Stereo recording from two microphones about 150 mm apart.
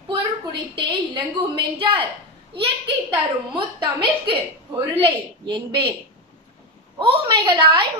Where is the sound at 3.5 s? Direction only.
35° right (ahead or behind).